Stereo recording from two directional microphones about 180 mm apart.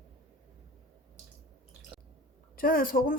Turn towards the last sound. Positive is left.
turn(degrees=55)  # may be behind; listen again after turning